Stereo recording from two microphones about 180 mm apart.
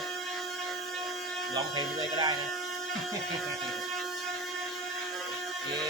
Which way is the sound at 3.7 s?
Centre (ahead or behind).